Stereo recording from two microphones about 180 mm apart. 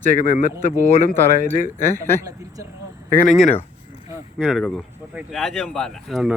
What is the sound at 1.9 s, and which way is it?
Speech, 15° left (ahead or behind).